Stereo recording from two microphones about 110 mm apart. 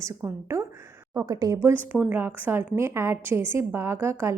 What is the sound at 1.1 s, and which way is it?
Speech, 35° right (ahead or behind).